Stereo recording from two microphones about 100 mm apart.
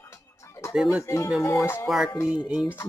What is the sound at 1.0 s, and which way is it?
Music, 30° left (ahead or behind).